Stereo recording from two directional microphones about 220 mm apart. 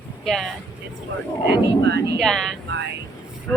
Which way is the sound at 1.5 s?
50° right (ahead or behind).